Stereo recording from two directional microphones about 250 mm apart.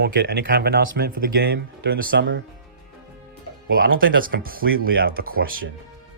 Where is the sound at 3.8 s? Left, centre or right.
Right.